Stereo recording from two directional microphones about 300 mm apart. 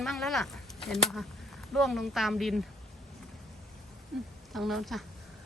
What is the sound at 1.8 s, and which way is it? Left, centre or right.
Speech, centre.